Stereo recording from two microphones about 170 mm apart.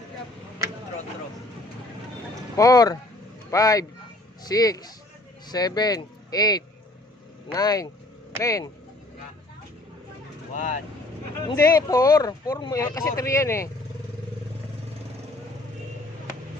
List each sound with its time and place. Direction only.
2.6 s speech: 20° left (ahead or behind)
10.5 s speech: 50° left (ahead or behind)
11.5 s speech: 20° left (ahead or behind)